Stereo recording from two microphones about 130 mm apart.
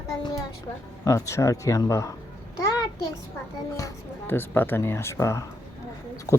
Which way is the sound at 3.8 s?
20° left (ahead or behind).